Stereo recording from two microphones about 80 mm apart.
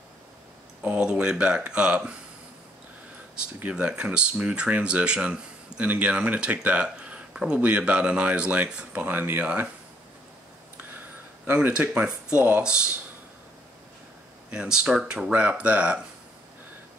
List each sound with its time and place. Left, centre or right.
0.8 s speech: centre
3.5 s speech: centre
11.4 s speech: centre
14.5 s speech: centre